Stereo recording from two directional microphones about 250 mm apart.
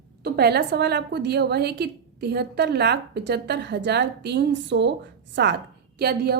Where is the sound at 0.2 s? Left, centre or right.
Right.